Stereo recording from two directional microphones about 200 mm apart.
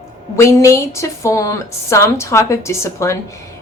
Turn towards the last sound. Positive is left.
turn(degrees=15)  # may be behind; listen again after turning